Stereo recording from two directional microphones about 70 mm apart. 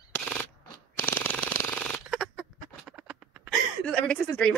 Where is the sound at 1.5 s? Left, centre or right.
Left.